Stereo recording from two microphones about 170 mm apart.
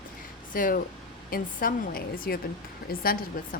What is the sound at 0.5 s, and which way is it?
A woman's voice, 55° left (ahead or behind).